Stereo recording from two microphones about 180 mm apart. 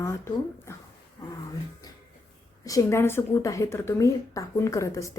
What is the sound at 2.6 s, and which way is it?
A woman's voice, 15° left (ahead or behind).